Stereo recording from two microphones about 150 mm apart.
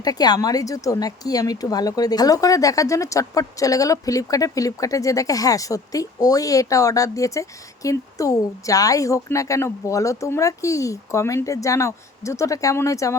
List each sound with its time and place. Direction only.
0.0 s speech: 25° left (ahead or behind)